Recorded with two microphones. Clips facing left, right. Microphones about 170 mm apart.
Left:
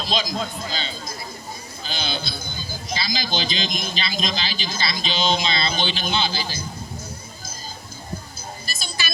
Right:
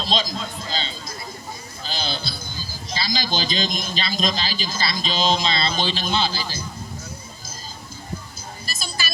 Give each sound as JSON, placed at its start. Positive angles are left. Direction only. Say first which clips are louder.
{"t": 0.0, "sound": "a man's voice", "louder": "even", "side_deg": -30}
{"t": 8.6, "sound": "music", "louder": "right 2 dB", "side_deg": -40}